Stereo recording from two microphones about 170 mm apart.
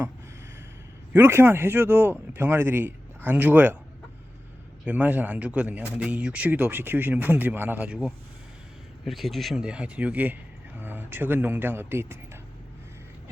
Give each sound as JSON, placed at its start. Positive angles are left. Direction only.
{"t": 1.1, "sound": "speech", "side_deg": -15}
{"t": 4.9, "sound": "speech", "side_deg": -10}